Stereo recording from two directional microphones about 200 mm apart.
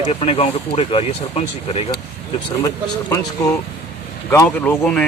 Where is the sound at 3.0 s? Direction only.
15° left (ahead or behind).